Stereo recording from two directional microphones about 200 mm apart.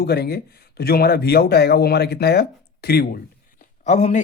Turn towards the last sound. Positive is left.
turn(degrees=35)  # may be behind; listen again after turning